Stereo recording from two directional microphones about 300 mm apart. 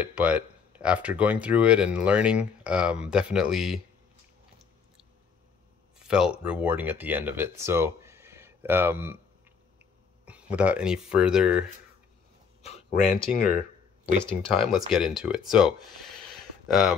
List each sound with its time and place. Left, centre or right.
0.0 s speech: centre
5.9 s a sound: centre
6.4 s speech: centre
10.2 s speech: centre
12.6 s speech: left
14.2 s speech: centre